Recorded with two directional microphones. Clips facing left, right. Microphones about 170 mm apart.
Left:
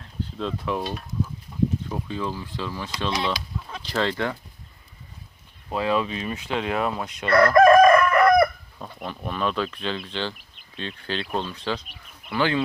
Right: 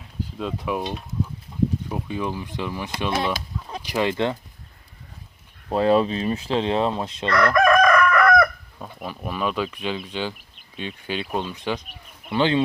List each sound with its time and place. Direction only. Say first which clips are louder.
0.0 s speech: even; 10° right (ahead or behind)
3.3 s chicken: right 2 dB; 35° right (ahead or behind)
3.8 s speech: right 3 dB; 15° right (ahead or behind)
5.7 s speech: right 5 dB; 35° right (ahead or behind)
7.3 s chicken: left 4 dB; 25° left (ahead or behind)
8.8 s speech: right 1 dB; 5° right (ahead or behind); by 12.6 s 20° right (ahead or behind)